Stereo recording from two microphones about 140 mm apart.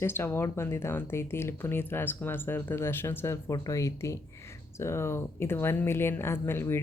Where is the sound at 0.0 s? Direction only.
15° left (ahead or behind).